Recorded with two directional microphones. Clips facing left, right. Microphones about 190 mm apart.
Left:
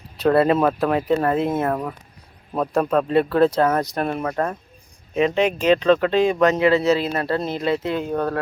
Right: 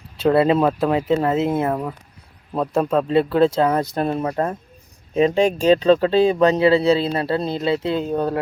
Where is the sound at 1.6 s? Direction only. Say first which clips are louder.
Right 1 dB; 10° right (ahead or behind).